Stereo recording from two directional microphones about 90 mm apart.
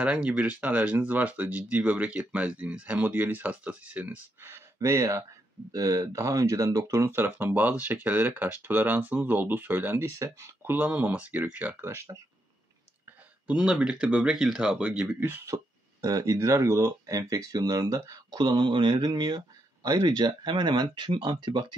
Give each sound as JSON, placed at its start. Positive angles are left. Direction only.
{"t": 0.0, "sound": "speech", "side_deg": -15}
{"t": 10.1, "sound": "speech", "side_deg": -30}
{"t": 10.6, "sound": "speech", "side_deg": -20}
{"t": 13.0, "sound": "speech", "side_deg": -10}
{"t": 15.0, "sound": "speech", "side_deg": -20}
{"t": 15.4, "sound": "speech", "side_deg": -40}